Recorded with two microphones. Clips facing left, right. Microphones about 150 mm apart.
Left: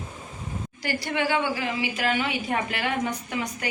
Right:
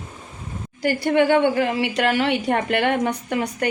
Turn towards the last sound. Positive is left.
turn(degrees=-60)  # may be behind; listen again after turning